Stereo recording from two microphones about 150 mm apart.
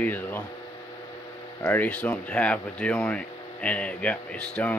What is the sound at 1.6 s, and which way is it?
Speech, 10° left (ahead or behind).